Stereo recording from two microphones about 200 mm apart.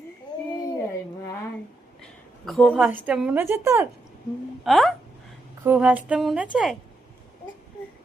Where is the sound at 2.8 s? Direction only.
10° right (ahead or behind).